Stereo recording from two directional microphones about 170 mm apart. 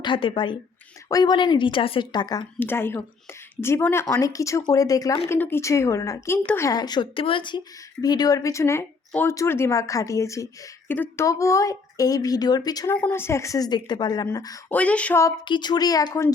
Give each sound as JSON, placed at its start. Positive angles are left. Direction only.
{"t": 0.0, "sound": "speech", "side_deg": 30}
{"t": 2.6, "sound": "speech", "side_deg": 15}
{"t": 6.7, "sound": "speech", "side_deg": 25}
{"t": 14.7, "sound": "speech", "side_deg": 10}
{"t": 15.4, "sound": "speech", "side_deg": 25}